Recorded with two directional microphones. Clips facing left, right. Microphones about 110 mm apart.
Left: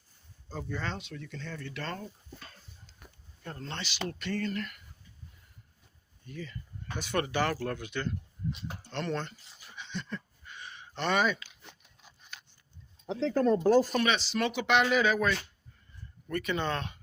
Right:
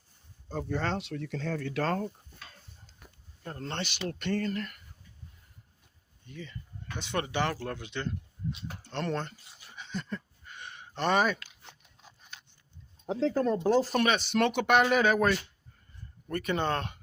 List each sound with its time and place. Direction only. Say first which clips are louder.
0.7 s speech: right 6 dB; 80° right
3.6 s speech: right 2 dB; 55° right (ahead or behind); by 4.8 s 35° right (ahead or behind)
6.2 s speech: left 2 dB; 20° right (ahead or behind)
8.9 s speech: right 1 dB; 35° right (ahead or behind)
9.7 s a sound: right 2 dB; 40° right (ahead or behind)
10.9 s speech: right 2 dB; 35° right (ahead or behind)
13.1 s speech: right 3 dB; 40° right (ahead or behind)
13.3 s speech: left 4 dB; 15° right (ahead or behind)
13.9 s speech: right 2 dB; 45° right (ahead or behind)
16.3 s speech: right 2 dB; 45° right (ahead or behind)